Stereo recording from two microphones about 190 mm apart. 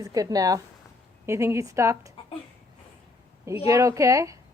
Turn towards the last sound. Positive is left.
turn(degrees=-15)  # may be behind; listen again after turning